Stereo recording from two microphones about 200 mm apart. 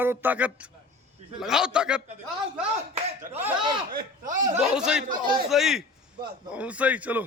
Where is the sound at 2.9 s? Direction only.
30° right (ahead or behind).